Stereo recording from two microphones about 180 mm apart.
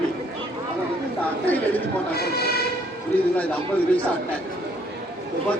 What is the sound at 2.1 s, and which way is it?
Train, 60° left (ahead or behind).